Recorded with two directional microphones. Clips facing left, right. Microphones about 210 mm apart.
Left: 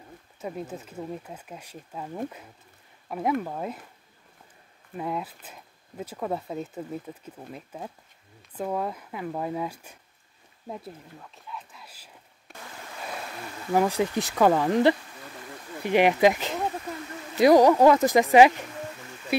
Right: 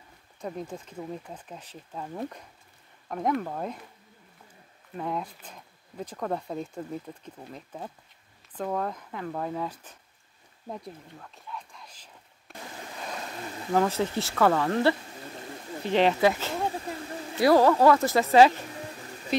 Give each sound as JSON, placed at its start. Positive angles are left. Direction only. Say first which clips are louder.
{"t": 0.4, "sound": "speech", "louder": "left 1 dB", "side_deg": 5}
{"t": 4.9, "sound": "speech", "louder": "left 1 dB", "side_deg": 5}
{"t": 10.7, "sound": "a sound", "louder": "left 1 dB", "side_deg": 5}
{"t": 13.7, "sound": "speech", "louder": "left 2 dB", "side_deg": 15}